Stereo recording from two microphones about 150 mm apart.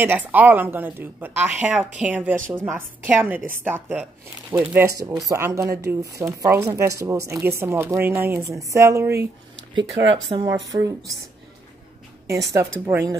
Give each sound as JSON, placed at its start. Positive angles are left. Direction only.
{"t": 0.0, "sound": "speech", "side_deg": -10}
{"t": 10.3, "sound": "speech", "side_deg": -25}
{"t": 12.3, "sound": "speech", "side_deg": -20}